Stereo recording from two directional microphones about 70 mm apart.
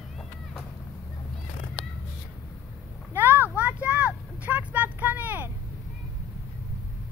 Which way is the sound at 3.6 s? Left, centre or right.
Right.